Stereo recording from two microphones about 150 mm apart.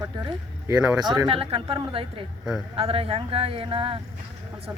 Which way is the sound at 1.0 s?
30° right (ahead or behind).